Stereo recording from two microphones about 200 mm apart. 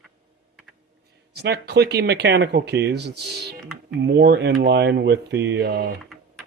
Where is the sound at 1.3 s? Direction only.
55° right (ahead or behind).